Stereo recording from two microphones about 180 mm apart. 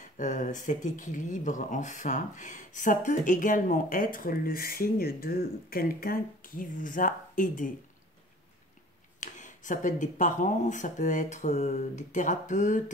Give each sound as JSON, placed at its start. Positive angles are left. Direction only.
{"t": 0.0, "sound": "speech", "side_deg": 45}
{"t": 9.2, "sound": "speech", "side_deg": 45}